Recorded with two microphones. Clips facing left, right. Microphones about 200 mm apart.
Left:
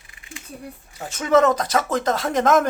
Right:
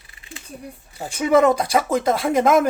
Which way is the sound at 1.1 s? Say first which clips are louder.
Right 1 dB; 10° right (ahead or behind).